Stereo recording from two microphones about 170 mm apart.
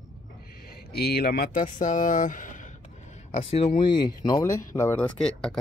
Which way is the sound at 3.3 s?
35° left (ahead or behind).